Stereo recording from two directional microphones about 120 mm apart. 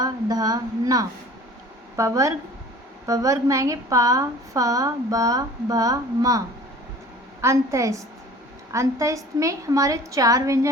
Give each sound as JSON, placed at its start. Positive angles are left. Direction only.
{"t": 0.0, "sound": "a woman's voice", "side_deg": -30}
{"t": 7.4, "sound": "a woman's voice", "side_deg": -25}